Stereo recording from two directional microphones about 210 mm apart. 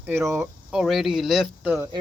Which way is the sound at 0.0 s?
10° right (ahead or behind).